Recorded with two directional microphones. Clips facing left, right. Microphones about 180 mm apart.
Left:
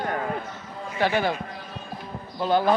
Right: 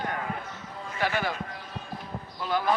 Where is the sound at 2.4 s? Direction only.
30° left (ahead or behind).